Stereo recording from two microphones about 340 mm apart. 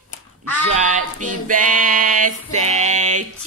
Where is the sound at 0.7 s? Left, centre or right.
Right.